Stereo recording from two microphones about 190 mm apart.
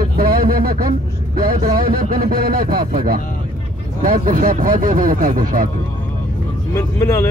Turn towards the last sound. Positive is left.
turn(degrees=15)  # may be behind; listen again after turning